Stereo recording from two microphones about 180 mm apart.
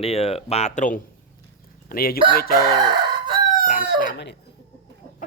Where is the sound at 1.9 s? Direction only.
55° left (ahead or behind).